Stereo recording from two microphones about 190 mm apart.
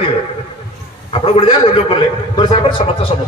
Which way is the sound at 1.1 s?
30° left (ahead or behind).